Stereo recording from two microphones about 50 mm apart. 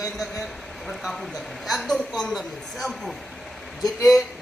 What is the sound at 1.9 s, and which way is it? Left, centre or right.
Speech, centre.